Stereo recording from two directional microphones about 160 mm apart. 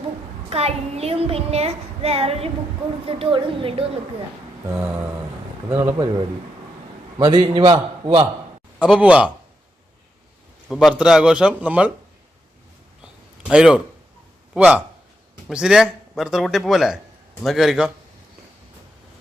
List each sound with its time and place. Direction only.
0.5 s child singing: 40° right (ahead or behind)
4.6 s a man's voice: 15° right (ahead or behind)
7.2 s a man's voice: 25° right (ahead or behind)
8.8 s a man's voice: 5° right (ahead or behind)
10.7 s speech: centre (ahead or behind)
13.4 s a man's voice: 5° right (ahead or behind)